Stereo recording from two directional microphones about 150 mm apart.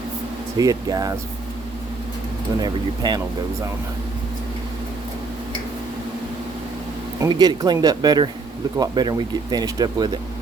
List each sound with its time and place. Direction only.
0.5 s speech: 25° right (ahead or behind)
2.6 s speech: 25° right (ahead or behind)
7.2 s speech: 25° right (ahead or behind)